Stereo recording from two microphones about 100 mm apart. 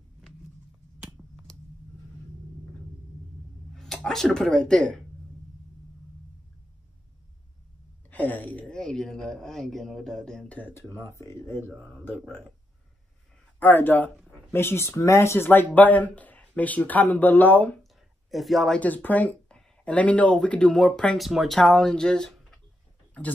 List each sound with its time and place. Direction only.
3.7 s speech: 5° left (ahead or behind)
8.1 s speech: 15° left (ahead or behind)
10.8 s speech: 25° left (ahead or behind)
13.6 s speech: 15° left (ahead or behind)
18.3 s speech: centre (ahead or behind)
18.8 s speech: 15° left (ahead or behind)
21.2 s speech: centre (ahead or behind)
21.5 s speech: 10° left (ahead or behind)